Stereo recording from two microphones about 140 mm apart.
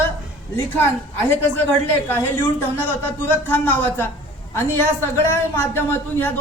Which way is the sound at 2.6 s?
15° left (ahead or behind).